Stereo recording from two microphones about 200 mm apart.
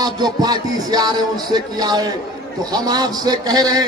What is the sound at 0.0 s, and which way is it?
A man's voice, 20° right (ahead or behind).